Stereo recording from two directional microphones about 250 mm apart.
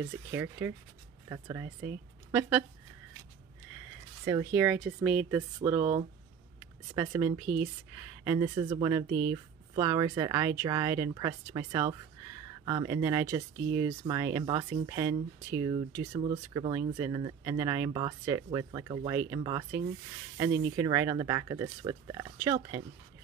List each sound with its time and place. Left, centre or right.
0.3 s speech: centre
4.2 s speech: centre
7.0 s speech: centre